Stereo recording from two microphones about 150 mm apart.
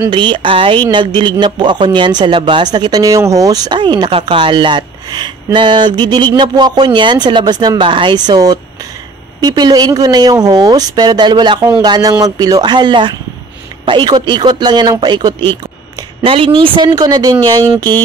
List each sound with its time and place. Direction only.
0.1 s a man's voice: 35° right (ahead or behind)